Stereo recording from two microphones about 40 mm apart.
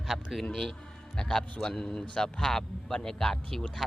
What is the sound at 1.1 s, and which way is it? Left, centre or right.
Speech, centre.